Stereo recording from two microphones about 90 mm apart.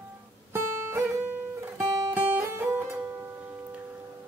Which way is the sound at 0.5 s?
25° right (ahead or behind).